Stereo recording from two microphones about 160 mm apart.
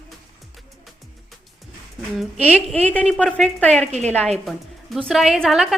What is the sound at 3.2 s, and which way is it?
Speech, centre (ahead or behind).